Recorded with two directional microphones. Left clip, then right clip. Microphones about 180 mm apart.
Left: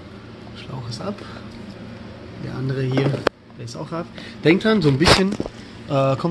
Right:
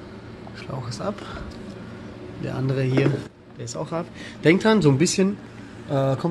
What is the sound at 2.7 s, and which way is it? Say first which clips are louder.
A man's voice: even; 20° right (ahead or behind).